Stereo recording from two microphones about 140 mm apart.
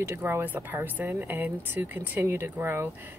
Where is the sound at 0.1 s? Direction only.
20° right (ahead or behind).